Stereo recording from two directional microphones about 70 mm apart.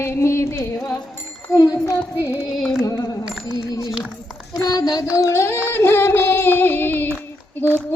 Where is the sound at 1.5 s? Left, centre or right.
Left.